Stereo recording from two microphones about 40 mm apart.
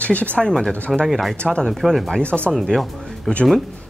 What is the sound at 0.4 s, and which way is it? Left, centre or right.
Speech, centre.